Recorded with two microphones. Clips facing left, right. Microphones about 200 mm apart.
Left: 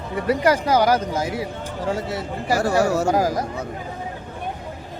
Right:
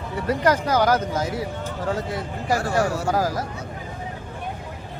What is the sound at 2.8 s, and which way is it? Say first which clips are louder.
Speech: left 5 dB; 45° left (ahead or behind).